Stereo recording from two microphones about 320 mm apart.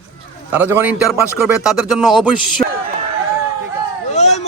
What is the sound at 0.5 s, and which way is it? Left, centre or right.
A man's voice, centre.